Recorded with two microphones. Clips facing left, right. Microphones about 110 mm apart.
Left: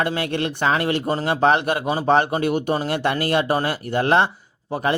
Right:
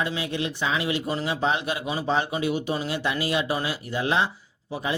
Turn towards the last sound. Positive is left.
turn(degrees=55)  # may be behind; listen again after turning